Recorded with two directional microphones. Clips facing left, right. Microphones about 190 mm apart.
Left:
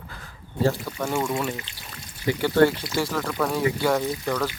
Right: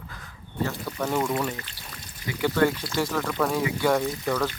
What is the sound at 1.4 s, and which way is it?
Speech, 10° left (ahead or behind).